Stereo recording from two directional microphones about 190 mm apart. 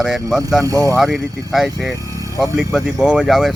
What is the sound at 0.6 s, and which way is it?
Speech, 15° right (ahead or behind).